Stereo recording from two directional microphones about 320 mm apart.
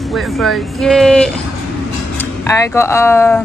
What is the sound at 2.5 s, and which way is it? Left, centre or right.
Speech, centre.